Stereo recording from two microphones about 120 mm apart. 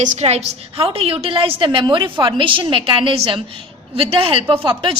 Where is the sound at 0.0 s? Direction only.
65° right (ahead or behind).